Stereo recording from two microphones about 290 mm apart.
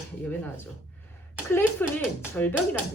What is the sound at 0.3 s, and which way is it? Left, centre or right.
Speech, centre.